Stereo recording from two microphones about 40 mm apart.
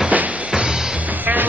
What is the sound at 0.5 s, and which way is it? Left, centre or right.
Music, centre.